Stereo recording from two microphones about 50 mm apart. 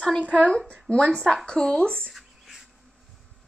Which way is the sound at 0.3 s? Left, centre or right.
Left.